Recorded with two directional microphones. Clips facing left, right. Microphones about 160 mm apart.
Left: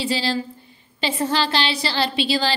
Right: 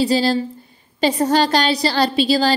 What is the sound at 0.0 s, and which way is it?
Speech, 40° right (ahead or behind).